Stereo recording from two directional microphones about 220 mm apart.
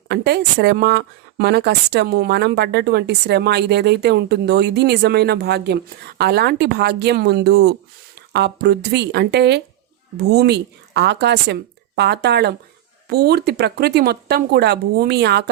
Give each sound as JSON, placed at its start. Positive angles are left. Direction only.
{"t": 0.1, "sound": "speech", "side_deg": -50}